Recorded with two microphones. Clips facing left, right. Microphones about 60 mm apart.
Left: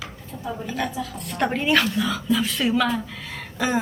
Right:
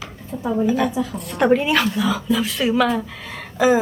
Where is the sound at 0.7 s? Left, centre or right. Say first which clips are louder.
Right 8 dB; centre.